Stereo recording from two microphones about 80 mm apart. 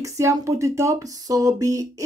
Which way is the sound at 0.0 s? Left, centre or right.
Right.